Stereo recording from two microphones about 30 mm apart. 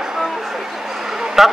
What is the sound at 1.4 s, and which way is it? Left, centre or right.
Speech, centre.